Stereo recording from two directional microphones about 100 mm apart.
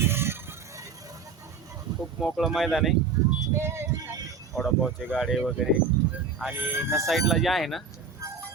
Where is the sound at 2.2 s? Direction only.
Centre (ahead or behind).